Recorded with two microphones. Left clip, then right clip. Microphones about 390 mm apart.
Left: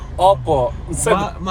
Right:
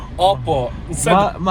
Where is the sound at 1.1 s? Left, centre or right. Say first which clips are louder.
Right 6 dB; centre.